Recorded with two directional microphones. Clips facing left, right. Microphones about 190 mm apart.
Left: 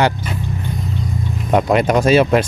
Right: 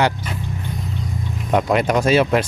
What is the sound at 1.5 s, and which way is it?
Speech, 40° left (ahead or behind).